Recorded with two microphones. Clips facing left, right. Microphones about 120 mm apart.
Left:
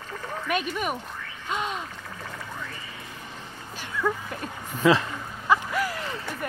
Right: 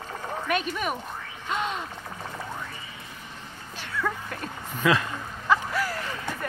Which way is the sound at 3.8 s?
10° left (ahead or behind).